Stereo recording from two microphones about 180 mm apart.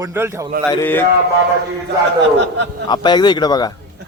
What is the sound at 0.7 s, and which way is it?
Mantra, 15° left (ahead or behind).